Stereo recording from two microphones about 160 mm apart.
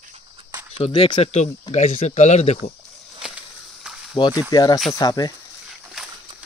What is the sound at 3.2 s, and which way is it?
Walk, 5° right (ahead or behind).